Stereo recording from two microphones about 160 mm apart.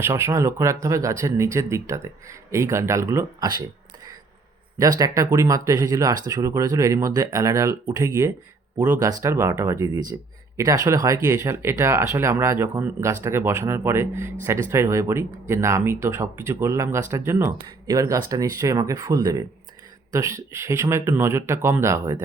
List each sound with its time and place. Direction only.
0.0 s speech: 15° right (ahead or behind)
4.8 s speech: 20° right (ahead or behind)